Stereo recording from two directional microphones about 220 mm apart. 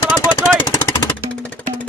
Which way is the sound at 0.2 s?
15° left (ahead or behind).